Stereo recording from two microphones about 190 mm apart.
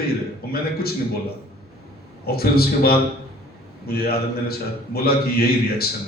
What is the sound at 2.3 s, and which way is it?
A man's voice, 55° left (ahead or behind).